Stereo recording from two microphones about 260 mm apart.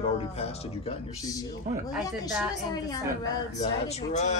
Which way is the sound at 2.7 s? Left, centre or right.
Centre.